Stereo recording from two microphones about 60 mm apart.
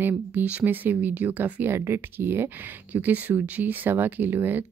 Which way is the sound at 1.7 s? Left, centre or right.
Right.